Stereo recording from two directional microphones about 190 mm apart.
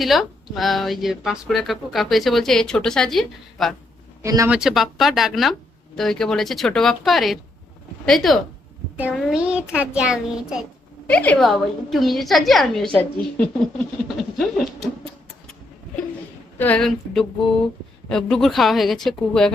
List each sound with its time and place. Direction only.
0.0 s speech: centre (ahead or behind)
4.2 s speech: 15° right (ahead or behind)
4.5 s speech: centre (ahead or behind)
11.1 s speech: 5° left (ahead or behind)
16.6 s speech: 5° left (ahead or behind)